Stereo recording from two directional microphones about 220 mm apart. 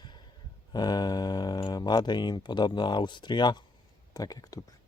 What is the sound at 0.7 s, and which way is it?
Speech, 20° left (ahead or behind).